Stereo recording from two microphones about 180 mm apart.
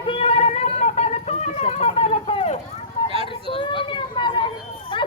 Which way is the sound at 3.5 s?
30° left (ahead or behind).